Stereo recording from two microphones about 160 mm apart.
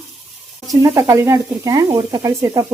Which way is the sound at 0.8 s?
20° right (ahead or behind).